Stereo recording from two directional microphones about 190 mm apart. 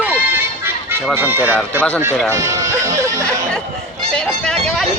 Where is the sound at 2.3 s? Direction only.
15° right (ahead or behind).